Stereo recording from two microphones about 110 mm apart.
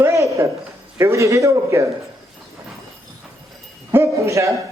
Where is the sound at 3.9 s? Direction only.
25° right (ahead or behind).